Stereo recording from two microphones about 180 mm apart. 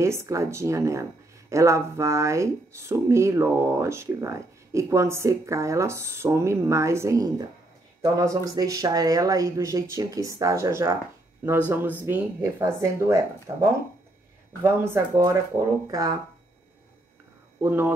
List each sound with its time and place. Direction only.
0.0 s speech: 15° right (ahead or behind)
17.6 s speech: 10° right (ahead or behind)